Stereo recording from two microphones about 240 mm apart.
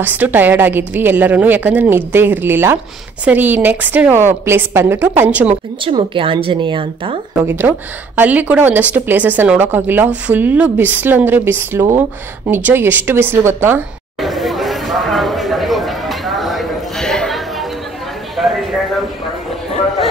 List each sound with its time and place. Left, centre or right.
0.0 s a woman's voice: centre
5.5 s speech: right
7.4 s a woman's voice: centre
12.4 s a sound: centre